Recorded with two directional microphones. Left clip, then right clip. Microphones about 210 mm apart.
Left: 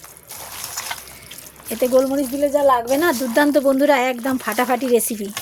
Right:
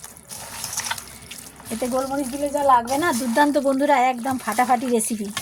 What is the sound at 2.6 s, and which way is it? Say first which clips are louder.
Speech: right 1 dB; 40° left (ahead or behind).